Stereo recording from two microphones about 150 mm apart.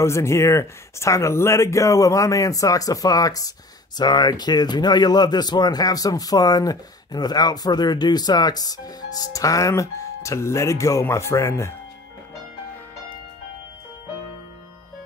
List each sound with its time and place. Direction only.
0.0 s speech: 20° left (ahead or behind)